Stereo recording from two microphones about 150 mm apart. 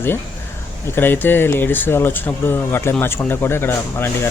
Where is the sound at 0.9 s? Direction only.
15° left (ahead or behind).